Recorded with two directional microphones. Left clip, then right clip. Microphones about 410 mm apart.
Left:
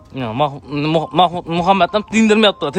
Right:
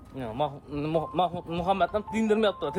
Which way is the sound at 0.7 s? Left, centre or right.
Left.